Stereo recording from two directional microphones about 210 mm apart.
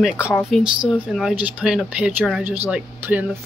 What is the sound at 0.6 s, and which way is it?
Speech, centre (ahead or behind).